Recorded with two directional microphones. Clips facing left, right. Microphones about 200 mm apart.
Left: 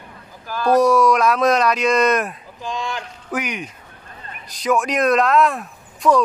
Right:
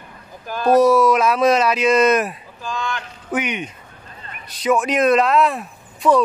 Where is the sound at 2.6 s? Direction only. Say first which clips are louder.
Even; 25° left (ahead or behind).